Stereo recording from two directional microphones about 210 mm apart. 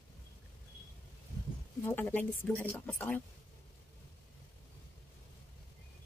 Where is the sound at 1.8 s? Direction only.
10° left (ahead or behind).